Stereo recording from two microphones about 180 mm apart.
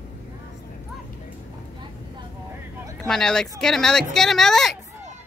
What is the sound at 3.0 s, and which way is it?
A woman's voice, 5° left (ahead or behind).